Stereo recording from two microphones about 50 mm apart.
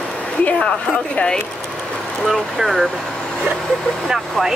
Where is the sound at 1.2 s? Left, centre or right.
Centre.